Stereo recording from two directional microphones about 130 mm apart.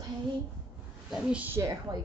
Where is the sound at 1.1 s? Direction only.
10° right (ahead or behind).